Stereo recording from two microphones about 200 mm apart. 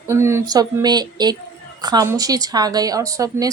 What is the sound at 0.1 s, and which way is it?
A woman's voice, 15° right (ahead or behind).